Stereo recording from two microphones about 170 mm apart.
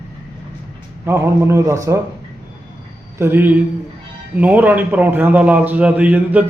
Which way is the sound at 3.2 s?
10° right (ahead or behind).